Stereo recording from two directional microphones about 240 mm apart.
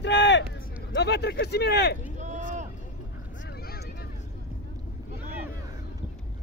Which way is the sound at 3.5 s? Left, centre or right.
Left.